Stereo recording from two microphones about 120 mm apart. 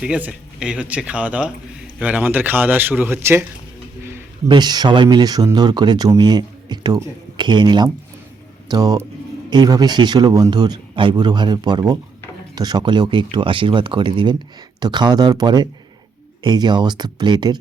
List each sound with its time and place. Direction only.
0.0 s speech: 10° right (ahead or behind)
4.4 s speech: 35° right (ahead or behind)